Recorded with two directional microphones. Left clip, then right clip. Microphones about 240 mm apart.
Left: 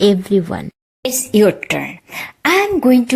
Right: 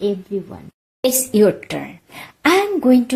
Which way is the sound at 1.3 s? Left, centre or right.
Centre.